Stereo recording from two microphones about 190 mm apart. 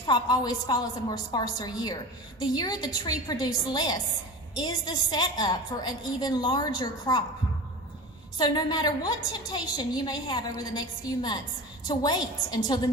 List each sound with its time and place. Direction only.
0.1 s a woman's voice: 20° left (ahead or behind)
8.4 s a woman's voice: 20° left (ahead or behind)